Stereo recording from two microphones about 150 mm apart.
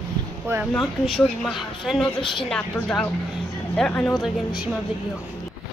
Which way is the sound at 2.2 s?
35° left (ahead or behind).